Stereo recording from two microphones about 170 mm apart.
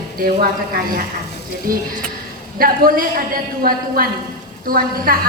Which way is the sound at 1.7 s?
55° right (ahead or behind).